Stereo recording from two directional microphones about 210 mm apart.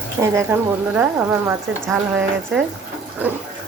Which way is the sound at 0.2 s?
10° right (ahead or behind).